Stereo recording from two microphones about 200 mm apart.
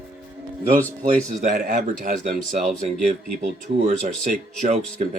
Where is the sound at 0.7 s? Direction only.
5° left (ahead or behind).